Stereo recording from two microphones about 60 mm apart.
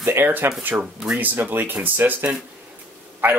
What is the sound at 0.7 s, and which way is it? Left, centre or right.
Speech, centre.